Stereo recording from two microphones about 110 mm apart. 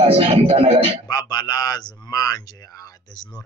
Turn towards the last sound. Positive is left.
turn(degrees=35)  # may be behind; listen again after turning